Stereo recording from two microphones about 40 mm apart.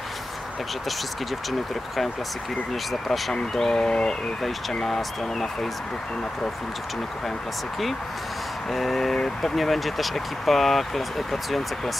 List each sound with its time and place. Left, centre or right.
2.9 s speech: centre
4.8 s speech: centre
8.7 s speech: centre